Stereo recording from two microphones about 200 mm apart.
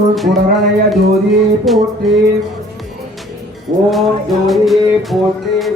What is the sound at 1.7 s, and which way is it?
Music, centre (ahead or behind).